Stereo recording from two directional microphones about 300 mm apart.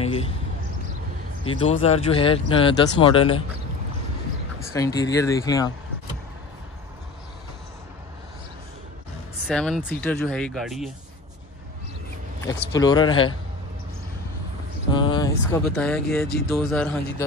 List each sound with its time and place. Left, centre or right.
0.0 s basketball bounce: centre
1.4 s speech: centre
4.7 s speech: centre
9.5 s speech: centre
12.4 s speech: centre
14.9 s a sound: centre
15.8 s speech: centre